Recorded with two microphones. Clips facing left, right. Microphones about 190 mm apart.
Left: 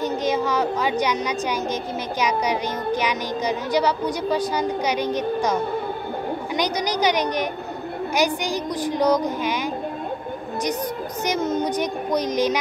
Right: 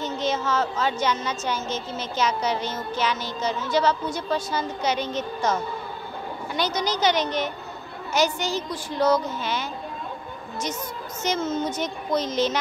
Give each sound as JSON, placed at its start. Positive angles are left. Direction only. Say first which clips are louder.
{"t": 0.0, "sound": "a woman's voice", "louder": "left 4 dB", "side_deg": 10}
{"t": 11.2, "sound": "a woman's voice", "louder": "left 2 dB", "side_deg": 15}